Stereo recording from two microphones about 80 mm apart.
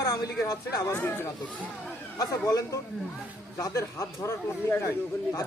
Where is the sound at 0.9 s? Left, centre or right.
Left.